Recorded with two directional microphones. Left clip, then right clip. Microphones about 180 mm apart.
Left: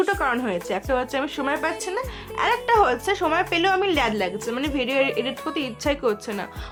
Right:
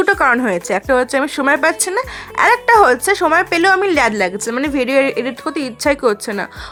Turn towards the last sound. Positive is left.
turn(degrees=-45)  # may be behind; listen again after turning